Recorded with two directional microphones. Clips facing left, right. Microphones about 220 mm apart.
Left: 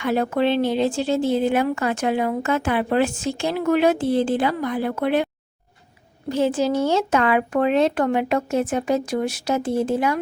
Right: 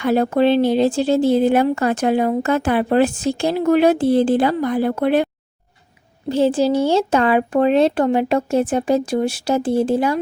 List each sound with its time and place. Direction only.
0.0 s a woman's voice: 35° right (ahead or behind)